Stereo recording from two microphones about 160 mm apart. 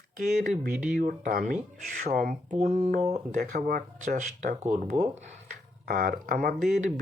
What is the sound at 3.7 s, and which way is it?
Speech, 55° right (ahead or behind).